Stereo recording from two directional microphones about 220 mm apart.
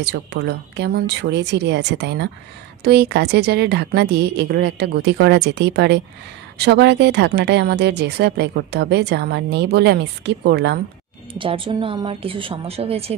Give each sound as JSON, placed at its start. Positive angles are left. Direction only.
{"t": 0.0, "sound": "speech", "side_deg": -50}
{"t": 11.3, "sound": "speech", "side_deg": -25}